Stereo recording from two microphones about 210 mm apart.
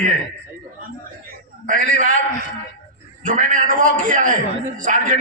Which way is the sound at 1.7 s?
40° right (ahead or behind).